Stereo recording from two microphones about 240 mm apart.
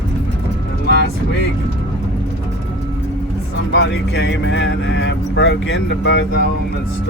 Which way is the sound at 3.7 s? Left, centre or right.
Left.